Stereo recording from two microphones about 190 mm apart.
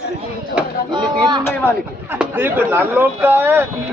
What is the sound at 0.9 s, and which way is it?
Speech, 25° right (ahead or behind).